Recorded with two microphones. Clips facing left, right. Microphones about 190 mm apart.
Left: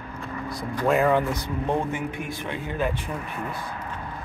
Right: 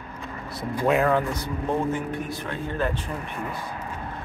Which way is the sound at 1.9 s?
15° left (ahead or behind).